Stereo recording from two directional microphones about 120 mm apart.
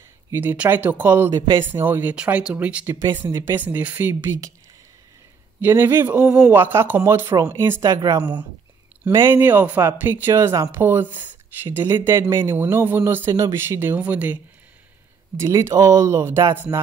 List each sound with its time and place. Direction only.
0.3 s speech: 15° right (ahead or behind)
5.6 s speech: 20° right (ahead or behind)
7.8 s speech: 30° right (ahead or behind)
9.1 s speech: 20° right (ahead or behind)